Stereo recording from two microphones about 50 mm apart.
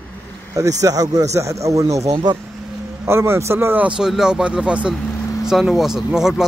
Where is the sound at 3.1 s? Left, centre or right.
Right.